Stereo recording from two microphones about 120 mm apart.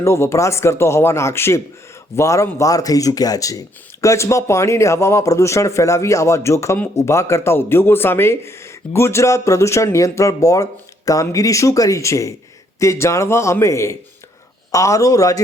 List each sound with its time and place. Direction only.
0.0 s speech: 20° left (ahead or behind)